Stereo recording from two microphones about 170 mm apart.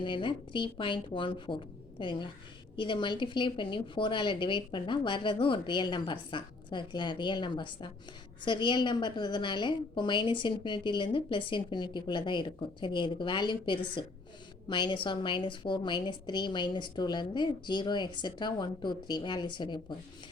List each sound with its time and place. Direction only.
0.0 s a woman's voice: 30° left (ahead or behind)